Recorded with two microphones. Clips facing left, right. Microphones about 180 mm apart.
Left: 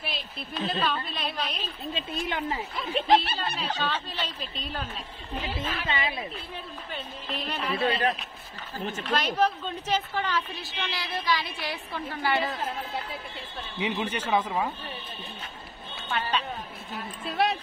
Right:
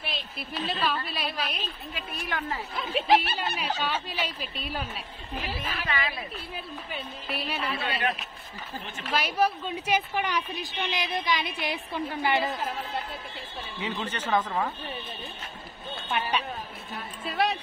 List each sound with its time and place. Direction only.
0.0 s a woman's voice: 5° right (ahead or behind)
2.0 s speech: 25° left (ahead or behind)
2.7 s a woman's voice: centre (ahead or behind)
5.9 s speech: 25° left (ahead or behind)
6.5 s a woman's voice: 10° right (ahead or behind)
7.8 s speech: 35° left (ahead or behind)
9.0 s a woman's voice: 10° right (ahead or behind)
13.7 s speech: 15° left (ahead or behind)
16.1 s a woman's voice: 15° right (ahead or behind)
16.9 s speech: centre (ahead or behind)